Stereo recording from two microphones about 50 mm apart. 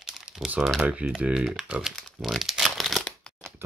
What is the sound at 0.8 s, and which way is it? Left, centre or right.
Speech, right.